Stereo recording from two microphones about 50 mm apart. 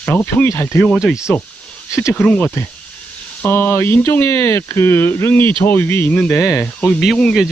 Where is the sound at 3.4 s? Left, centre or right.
Left.